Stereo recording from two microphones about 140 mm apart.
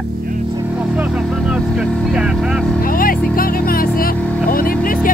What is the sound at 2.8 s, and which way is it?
Vehicle, 90° left.